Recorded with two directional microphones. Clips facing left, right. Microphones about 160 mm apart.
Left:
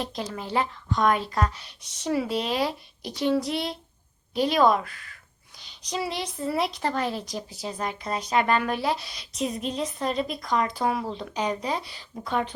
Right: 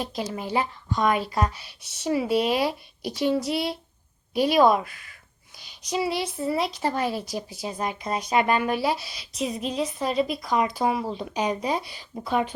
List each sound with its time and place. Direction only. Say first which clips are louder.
0.0 s speech: right 2 dB; 5° right (ahead or behind)